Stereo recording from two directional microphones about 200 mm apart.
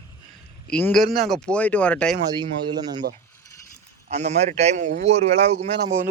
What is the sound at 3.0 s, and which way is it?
Mechanisms, 50° right (ahead or behind).